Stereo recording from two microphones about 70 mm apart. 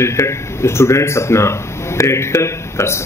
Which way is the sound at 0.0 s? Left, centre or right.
Left.